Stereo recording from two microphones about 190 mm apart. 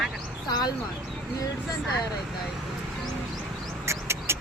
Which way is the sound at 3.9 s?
15° right (ahead or behind).